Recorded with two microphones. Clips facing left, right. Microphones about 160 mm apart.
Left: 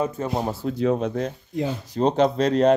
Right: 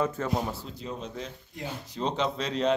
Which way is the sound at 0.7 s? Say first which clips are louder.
Left 15 dB; 65° left (ahead or behind).